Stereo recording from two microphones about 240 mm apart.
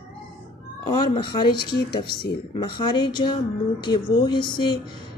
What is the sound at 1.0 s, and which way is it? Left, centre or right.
Speech, centre.